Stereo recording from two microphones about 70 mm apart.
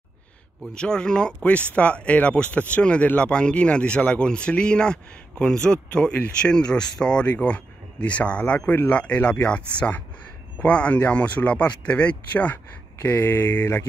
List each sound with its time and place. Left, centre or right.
0.7 s speech: centre